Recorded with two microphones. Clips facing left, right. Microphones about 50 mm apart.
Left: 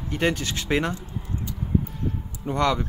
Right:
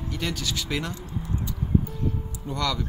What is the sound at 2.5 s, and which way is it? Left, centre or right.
Speech, left.